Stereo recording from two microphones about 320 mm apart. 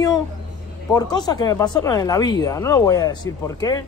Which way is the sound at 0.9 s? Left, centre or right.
Centre.